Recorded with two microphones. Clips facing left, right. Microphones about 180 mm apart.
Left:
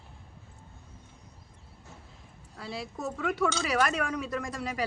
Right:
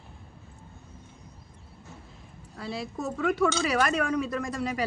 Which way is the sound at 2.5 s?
10° left (ahead or behind).